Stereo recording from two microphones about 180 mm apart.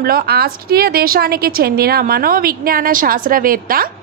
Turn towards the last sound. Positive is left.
turn(degrees=-50)  # may be behind; listen again after turning